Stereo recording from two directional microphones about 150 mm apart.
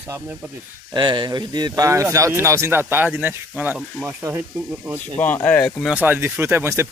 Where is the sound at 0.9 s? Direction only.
30° right (ahead or behind); by 5.0 s 15° right (ahead or behind).